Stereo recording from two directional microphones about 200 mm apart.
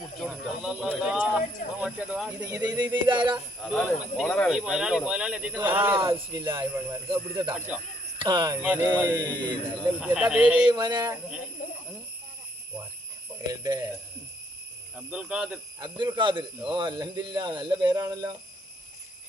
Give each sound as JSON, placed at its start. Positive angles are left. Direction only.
{"t": 0.2, "sound": "speech", "side_deg": -5}
{"t": 2.5, "sound": "a man's voice", "side_deg": -15}
{"t": 3.6, "sound": "speech", "side_deg": 5}
{"t": 6.0, "sound": "a man's voice", "side_deg": -25}
{"t": 7.5, "sound": "speech", "side_deg": -5}
{"t": 8.2, "sound": "a man's voice", "side_deg": -20}
{"t": 8.6, "sound": "speech", "side_deg": -10}
{"t": 10.7, "sound": "a man's voice", "side_deg": -20}
{"t": 11.6, "sound": "a sound", "side_deg": 45}
{"t": 13.5, "sound": "speech", "side_deg": -15}
{"t": 14.9, "sound": "speech", "side_deg": -5}
{"t": 15.8, "sound": "a man's voice", "side_deg": -20}